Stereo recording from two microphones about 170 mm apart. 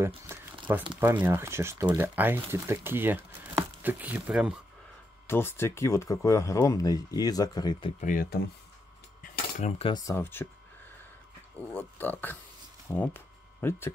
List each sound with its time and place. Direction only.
0.3 s crumpling: 10° right (ahead or behind)
0.9 s speech: 10° right (ahead or behind)
5.2 s speech: 15° left (ahead or behind)
8.0 s speech: 55° left (ahead or behind)
9.6 s speech: 40° left (ahead or behind)
9.9 s speech: 15° left (ahead or behind)
11.7 s speech: 10° left (ahead or behind)